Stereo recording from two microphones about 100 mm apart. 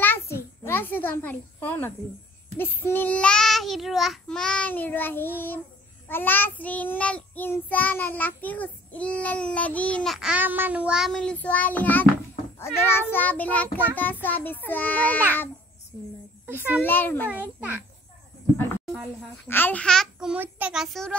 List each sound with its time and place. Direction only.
0.0 s a sound: 20° left (ahead or behind)
2.5 s child singing: 20° left (ahead or behind)
10.0 s child singing: 5° right (ahead or behind)
10.3 s child singing: 20° right (ahead or behind)
11.1 s child singing: 5° left (ahead or behind)
14.2 s a child's voice: 20° left (ahead or behind)
16.4 s a child's voice: 20° right (ahead or behind)
16.8 s a child's voice: 20° left (ahead or behind)
17.3 s child singing: 15° right (ahead or behind)
19.4 s a child's voice: 20° left (ahead or behind)
19.8 s child singing: 5° left (ahead or behind)
20.3 s child singing: 20° right (ahead or behind)
20.7 s child singing: 5° right (ahead or behind)